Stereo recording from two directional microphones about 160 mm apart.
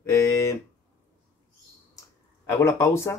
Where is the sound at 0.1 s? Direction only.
20° left (ahead or behind).